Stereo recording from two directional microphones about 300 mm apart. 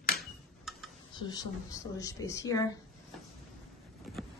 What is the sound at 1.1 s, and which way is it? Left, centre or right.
A woman's voice, centre.